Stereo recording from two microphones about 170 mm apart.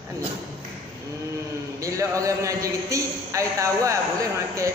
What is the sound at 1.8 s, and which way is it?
A man's voice, 20° right (ahead or behind).